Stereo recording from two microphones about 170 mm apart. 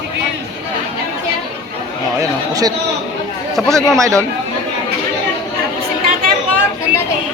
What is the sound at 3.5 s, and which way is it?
Speech, centre (ahead or behind).